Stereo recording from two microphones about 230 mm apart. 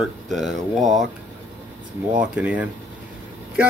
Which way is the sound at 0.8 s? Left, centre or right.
Right.